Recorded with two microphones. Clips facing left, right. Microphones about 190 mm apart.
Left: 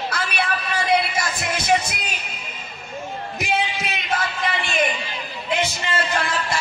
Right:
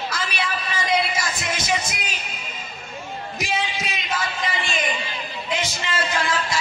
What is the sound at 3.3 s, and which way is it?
Music, 60° left (ahead or behind).